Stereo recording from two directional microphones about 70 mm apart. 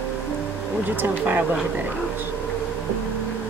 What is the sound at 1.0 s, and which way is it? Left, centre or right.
Speech, right.